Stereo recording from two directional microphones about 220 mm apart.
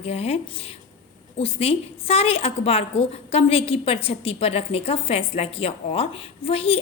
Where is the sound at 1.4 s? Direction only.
25° left (ahead or behind).